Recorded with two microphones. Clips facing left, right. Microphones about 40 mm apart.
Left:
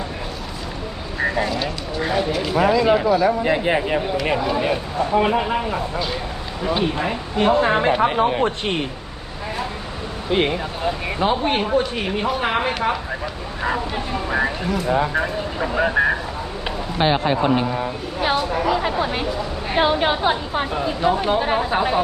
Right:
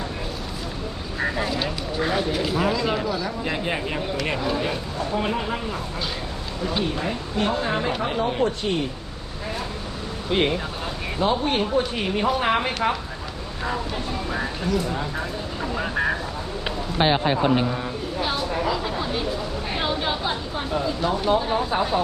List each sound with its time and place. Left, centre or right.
1.2 s speech: centre
2.6 s speech: centre
7.6 s speech: left
8.4 s speech: left
10.2 s speech: centre
11.8 s speech: centre
13.6 s speech: left
17.0 s speech: centre
18.3 s a sound: centre
18.7 s a sound: left
19.7 s speech: left
21.0 s speech: left